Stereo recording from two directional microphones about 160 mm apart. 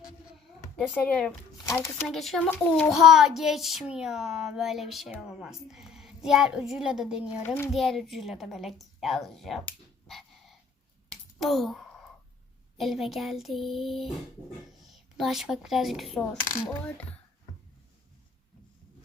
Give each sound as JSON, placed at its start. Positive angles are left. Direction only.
{"t": 0.8, "sound": "a child's voice", "side_deg": 10}
{"t": 2.0, "sound": "speech", "side_deg": 0}
{"t": 2.5, "sound": "a child's voice", "side_deg": 10}
{"t": 2.9, "sound": "speech", "side_deg": -5}
{"t": 7.4, "sound": "a child's voice", "side_deg": 15}
{"t": 7.7, "sound": "a woman's voice", "side_deg": 0}
{"t": 11.3, "sound": "a sound", "side_deg": 0}
{"t": 12.7, "sound": "speech", "side_deg": 0}